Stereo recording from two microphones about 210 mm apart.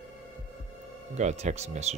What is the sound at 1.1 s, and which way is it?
Speech, 35° right (ahead or behind).